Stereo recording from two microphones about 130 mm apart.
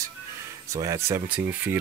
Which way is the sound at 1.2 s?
10° right (ahead or behind).